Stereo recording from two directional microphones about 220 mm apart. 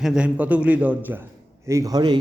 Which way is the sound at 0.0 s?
5° right (ahead or behind).